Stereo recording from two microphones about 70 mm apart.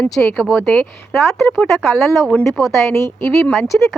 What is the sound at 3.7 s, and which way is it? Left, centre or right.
Speech, left.